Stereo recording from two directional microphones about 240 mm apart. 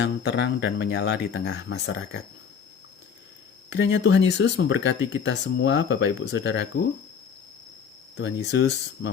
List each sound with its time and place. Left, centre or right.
0.0 s speech: left
3.7 s speech: left
8.1 s speech: left